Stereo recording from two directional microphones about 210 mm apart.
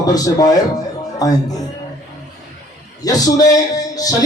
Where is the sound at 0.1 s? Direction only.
15° left (ahead or behind).